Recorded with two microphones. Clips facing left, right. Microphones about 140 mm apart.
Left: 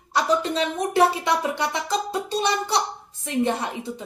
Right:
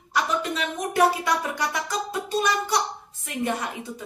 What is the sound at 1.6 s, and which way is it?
A child's voice, 25° left (ahead or behind).